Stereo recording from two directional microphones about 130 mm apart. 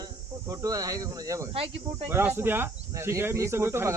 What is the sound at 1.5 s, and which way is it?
Speech, 45° right (ahead or behind).